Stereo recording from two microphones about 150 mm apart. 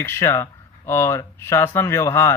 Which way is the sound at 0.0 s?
15° left (ahead or behind).